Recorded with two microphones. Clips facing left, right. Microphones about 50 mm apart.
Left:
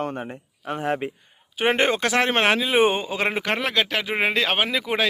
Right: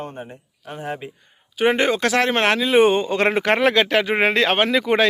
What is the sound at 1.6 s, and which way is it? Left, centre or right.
Speech, left.